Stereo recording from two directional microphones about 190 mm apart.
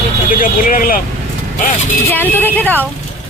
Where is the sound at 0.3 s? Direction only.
45° left (ahead or behind).